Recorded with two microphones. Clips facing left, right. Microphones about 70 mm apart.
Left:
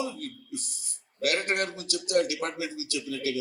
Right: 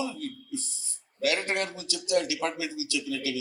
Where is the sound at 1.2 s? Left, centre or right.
Left.